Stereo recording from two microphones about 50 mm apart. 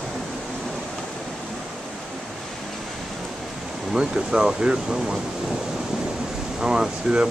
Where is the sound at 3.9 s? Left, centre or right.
Centre.